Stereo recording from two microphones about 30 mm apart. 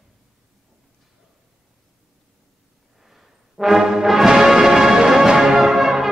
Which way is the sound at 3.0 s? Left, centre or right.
Centre.